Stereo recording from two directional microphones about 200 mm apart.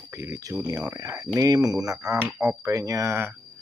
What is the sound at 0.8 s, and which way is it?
Speech, 15° right (ahead or behind).